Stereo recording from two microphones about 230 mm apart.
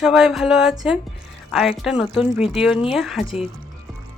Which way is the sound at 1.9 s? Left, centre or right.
Left.